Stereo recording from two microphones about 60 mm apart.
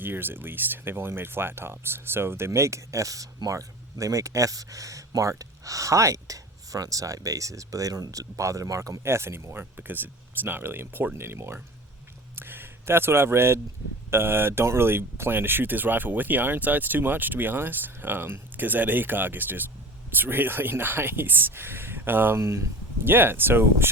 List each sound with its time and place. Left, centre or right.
0.0 s speech: right
2.5 s speech: right
9.0 s speech: right
12.4 s a sound: right
14.1 s speech: right
23.0 s speech: right